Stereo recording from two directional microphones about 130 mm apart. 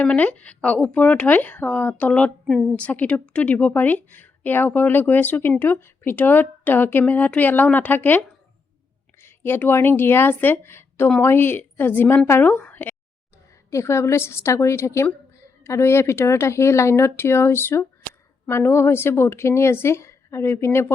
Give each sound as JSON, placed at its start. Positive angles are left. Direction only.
{"t": 0.0, "sound": "speech", "side_deg": 10}
{"t": 9.2, "sound": "a woman's voice", "side_deg": 15}